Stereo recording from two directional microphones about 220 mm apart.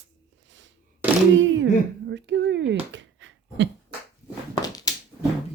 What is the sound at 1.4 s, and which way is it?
Speech, 60° right (ahead or behind).